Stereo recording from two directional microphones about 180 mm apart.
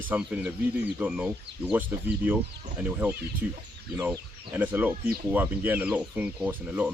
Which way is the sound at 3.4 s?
10° right (ahead or behind).